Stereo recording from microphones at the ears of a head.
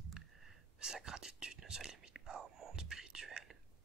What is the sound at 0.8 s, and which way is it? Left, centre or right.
Speech, right.